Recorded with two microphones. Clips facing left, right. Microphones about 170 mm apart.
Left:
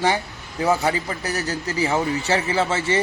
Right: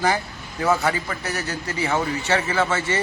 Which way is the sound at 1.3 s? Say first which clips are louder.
Left 5 dB; 35° left (ahead or behind).